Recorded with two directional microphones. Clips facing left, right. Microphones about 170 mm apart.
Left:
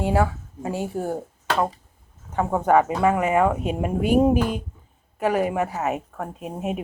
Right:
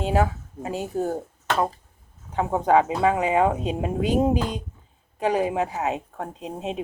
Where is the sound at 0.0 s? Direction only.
20° right (ahead or behind).